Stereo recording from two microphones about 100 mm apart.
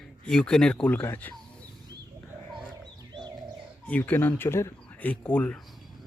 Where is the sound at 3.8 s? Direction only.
15° left (ahead or behind).